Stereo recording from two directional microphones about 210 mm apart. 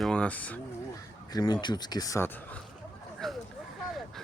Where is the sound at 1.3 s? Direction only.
20° left (ahead or behind).